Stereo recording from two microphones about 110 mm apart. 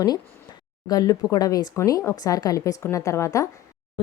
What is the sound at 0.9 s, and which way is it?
A woman's voice, 35° left (ahead or behind).